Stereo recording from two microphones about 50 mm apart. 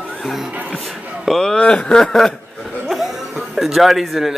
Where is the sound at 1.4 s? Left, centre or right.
Centre.